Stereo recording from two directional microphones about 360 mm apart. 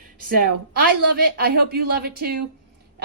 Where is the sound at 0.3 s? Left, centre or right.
Right.